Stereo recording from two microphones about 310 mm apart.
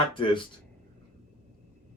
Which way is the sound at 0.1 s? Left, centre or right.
Centre.